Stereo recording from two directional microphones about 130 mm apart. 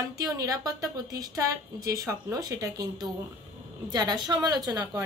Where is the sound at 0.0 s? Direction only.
25° right (ahead or behind).